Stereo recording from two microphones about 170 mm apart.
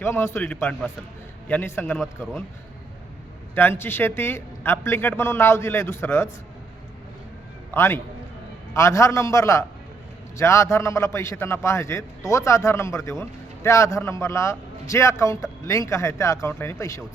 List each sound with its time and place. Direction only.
0.0 s a man's voice: 15° left (ahead or behind)
2.0 s speech: centre (ahead or behind)
3.5 s a man's voice: 10° left (ahead or behind)
7.7 s a man's voice: 15° left (ahead or behind)